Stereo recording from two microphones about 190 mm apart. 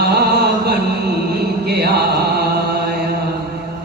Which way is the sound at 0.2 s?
55° right (ahead or behind).